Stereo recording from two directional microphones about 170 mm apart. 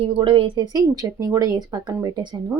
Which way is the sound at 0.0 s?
30° right (ahead or behind).